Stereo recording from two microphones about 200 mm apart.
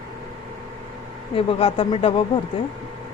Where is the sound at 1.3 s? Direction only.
30° left (ahead or behind).